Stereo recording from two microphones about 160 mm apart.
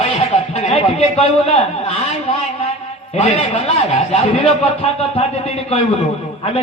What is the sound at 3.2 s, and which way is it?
A man's voice, 40° left (ahead or behind).